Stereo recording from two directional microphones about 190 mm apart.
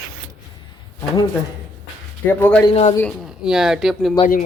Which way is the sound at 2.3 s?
10° left (ahead or behind).